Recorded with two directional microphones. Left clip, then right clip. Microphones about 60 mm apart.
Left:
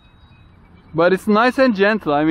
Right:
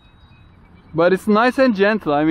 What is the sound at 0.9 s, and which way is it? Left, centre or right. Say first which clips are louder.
Speech: even; left.